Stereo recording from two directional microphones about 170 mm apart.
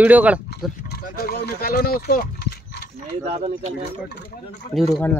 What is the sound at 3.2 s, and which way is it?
Speech, 40° right (ahead or behind).